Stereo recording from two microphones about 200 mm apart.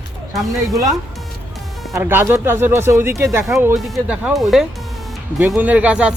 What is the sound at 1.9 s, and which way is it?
Speech, 10° right (ahead or behind).